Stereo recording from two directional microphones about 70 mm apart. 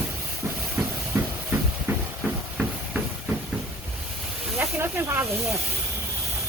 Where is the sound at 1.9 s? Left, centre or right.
Right.